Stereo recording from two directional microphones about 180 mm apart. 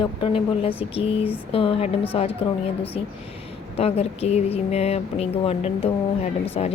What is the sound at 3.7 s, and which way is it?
A woman's voice, 35° left (ahead or behind).